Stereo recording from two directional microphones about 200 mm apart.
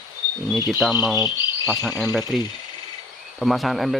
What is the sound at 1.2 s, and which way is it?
Cricket, 20° left (ahead or behind).